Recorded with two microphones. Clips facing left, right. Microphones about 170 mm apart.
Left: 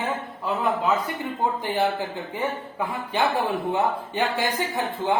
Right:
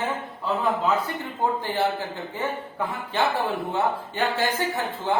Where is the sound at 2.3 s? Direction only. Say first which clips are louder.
Left 1 dB; 15° left (ahead or behind).